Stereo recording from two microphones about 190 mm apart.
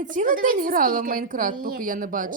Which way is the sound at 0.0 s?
45° right (ahead or behind).